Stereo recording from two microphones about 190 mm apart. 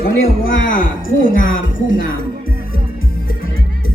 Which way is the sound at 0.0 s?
50° left (ahead or behind).